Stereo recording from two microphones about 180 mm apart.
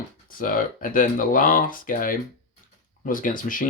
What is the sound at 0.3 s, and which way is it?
Speech, 50° left (ahead or behind).